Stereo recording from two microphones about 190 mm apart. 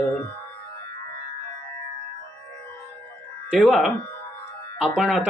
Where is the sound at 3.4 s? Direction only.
Centre (ahead or behind).